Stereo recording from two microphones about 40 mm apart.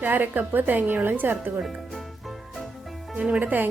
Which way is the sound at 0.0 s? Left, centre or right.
Right.